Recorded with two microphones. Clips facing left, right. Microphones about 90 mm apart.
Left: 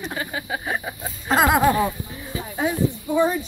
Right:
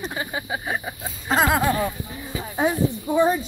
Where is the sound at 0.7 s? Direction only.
Centre (ahead or behind).